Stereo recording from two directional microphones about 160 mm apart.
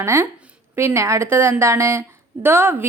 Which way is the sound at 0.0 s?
15° right (ahead or behind).